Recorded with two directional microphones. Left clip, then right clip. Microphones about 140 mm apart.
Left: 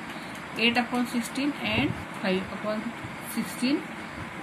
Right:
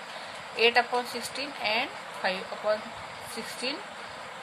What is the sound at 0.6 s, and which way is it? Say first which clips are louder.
Speech: right 2 dB; 90° right.